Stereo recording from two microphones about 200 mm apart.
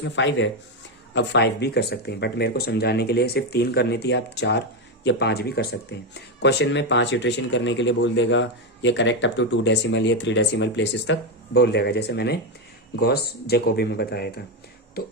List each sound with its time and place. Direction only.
0.0 s speech: 65° left (ahead or behind); by 15.1 s 50° left (ahead or behind)